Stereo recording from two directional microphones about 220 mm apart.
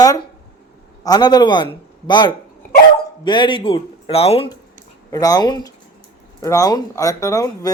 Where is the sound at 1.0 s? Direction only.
20° left (ahead or behind).